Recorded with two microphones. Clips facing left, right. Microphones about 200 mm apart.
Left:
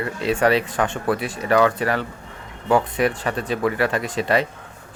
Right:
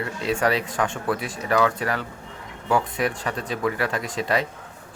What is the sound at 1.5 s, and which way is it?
Speech, 60° left (ahead or behind).